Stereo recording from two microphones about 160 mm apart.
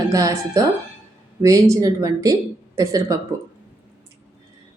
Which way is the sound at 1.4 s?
20° right (ahead or behind).